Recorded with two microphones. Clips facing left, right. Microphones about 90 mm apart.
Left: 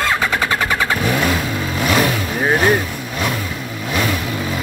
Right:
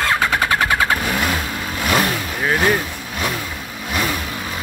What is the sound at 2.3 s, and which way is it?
Speech, 20° left (ahead or behind).